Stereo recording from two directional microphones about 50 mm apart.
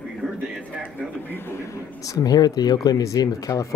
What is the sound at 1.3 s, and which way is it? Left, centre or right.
Speech, left.